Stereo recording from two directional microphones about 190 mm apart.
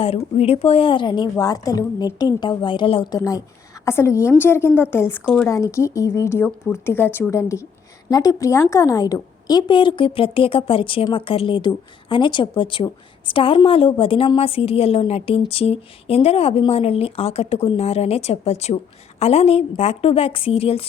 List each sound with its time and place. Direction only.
0.3 s a woman's voice: 35° left (ahead or behind); by 5.5 s 5° left (ahead or behind)
5.5 s a woman's voice: 15° left (ahead or behind)